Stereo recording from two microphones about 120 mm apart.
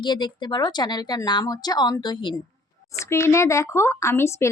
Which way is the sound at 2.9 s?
25° left (ahead or behind).